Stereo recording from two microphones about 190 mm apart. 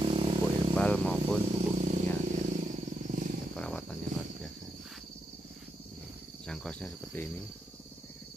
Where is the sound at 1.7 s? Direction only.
40° right (ahead or behind).